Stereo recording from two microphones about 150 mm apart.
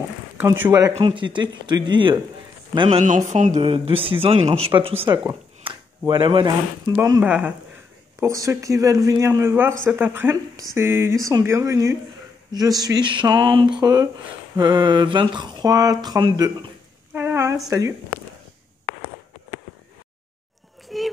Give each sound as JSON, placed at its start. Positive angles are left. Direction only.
{"t": 0.4, "sound": "speech", "side_deg": -15}
{"t": 3.0, "sound": "speech", "side_deg": -50}
{"t": 7.2, "sound": "speech", "side_deg": -10}
{"t": 8.2, "sound": "speech", "side_deg": -20}
{"t": 17.1, "sound": "a sound", "side_deg": -15}
{"t": 17.6, "sound": "speech", "side_deg": -25}
{"t": 20.9, "sound": "children playing", "side_deg": 0}